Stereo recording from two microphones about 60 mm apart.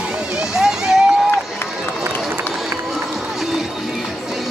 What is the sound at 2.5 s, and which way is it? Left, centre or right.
Run, centre.